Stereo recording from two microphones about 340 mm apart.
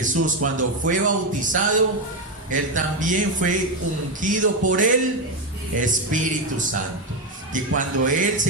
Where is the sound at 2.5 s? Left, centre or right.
Right.